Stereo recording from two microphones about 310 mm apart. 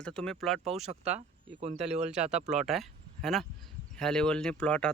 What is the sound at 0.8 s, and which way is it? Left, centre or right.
Speech, right.